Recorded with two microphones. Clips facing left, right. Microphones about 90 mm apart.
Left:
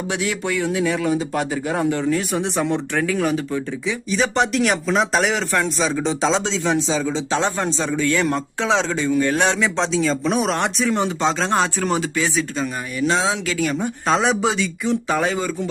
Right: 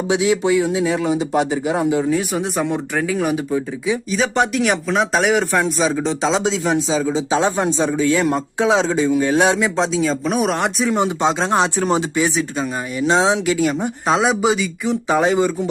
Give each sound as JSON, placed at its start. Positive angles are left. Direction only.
{"t": 0.1, "sound": "a man's voice", "side_deg": -15}
{"t": 4.1, "sound": "a man's voice", "side_deg": 0}
{"t": 15.0, "sound": "speech", "side_deg": -20}